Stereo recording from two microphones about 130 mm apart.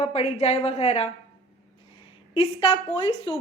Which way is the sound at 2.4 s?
50° left (ahead or behind).